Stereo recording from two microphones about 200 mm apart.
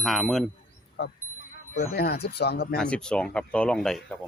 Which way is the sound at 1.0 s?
60° left (ahead or behind).